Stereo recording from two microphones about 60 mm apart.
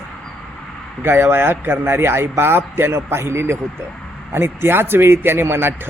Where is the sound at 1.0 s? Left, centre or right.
Right.